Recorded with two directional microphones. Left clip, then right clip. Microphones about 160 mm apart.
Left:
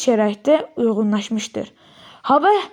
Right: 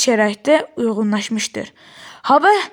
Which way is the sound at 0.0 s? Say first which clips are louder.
Right 2 dB; 15° right (ahead or behind).